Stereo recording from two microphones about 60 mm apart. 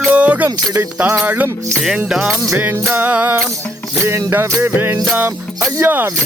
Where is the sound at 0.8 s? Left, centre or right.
Right.